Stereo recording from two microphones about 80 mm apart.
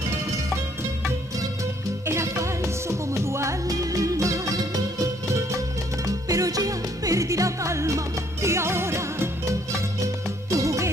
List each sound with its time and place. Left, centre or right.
2.0 s music: right
6.0 s music: right